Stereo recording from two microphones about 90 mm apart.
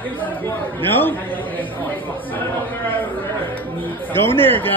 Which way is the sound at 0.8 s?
25° left (ahead or behind).